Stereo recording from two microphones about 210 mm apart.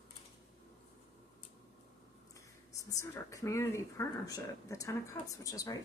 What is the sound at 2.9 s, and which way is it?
Speech, 15° left (ahead or behind).